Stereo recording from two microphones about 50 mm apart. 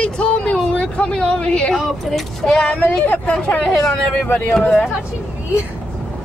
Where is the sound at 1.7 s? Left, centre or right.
Centre.